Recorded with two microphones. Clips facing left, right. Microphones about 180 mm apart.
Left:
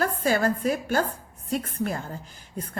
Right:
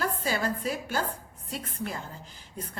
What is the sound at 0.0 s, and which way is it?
A woman's voice, 50° left (ahead or behind).